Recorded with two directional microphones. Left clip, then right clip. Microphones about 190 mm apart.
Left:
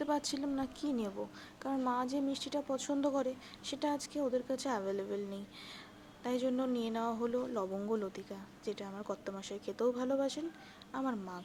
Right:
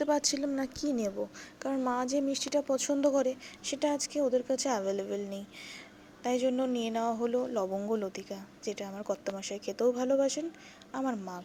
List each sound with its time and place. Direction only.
0.0 s speech: 15° right (ahead or behind)